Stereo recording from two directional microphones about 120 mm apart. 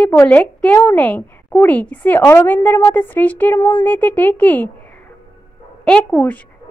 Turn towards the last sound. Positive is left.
turn(degrees=10)  # may be behind; listen again after turning